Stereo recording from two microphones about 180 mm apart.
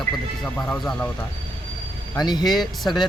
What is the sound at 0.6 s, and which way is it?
Speech, 5° left (ahead or behind).